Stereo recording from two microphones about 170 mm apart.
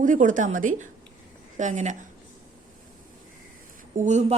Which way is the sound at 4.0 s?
45° right (ahead or behind).